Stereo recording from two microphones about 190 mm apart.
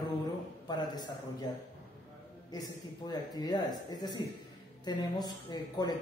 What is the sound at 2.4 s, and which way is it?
Speech, 20° left (ahead or behind).